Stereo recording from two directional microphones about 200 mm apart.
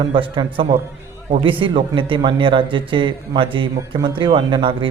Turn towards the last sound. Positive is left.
turn(degrees=-25)  # may be behind; listen again after turning